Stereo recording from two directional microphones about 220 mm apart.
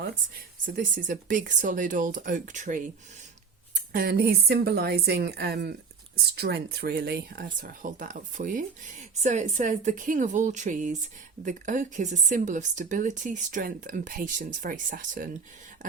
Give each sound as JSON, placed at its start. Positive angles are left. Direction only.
{"t": 0.6, "sound": "speech", "side_deg": -35}